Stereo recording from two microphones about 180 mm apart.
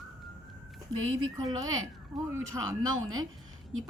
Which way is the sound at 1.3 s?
20° right (ahead or behind).